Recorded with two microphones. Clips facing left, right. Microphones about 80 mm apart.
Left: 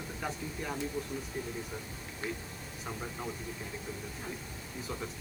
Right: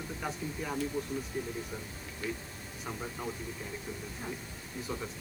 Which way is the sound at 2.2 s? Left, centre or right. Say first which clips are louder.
Right 1 dB; left.